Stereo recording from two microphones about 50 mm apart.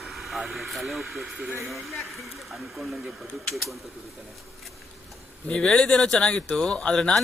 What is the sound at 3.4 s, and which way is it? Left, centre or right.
Speech, centre.